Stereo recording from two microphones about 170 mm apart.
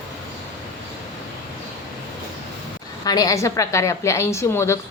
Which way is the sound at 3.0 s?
20° left (ahead or behind).